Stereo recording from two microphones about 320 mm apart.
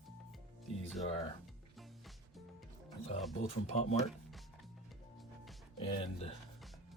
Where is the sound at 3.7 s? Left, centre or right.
Left.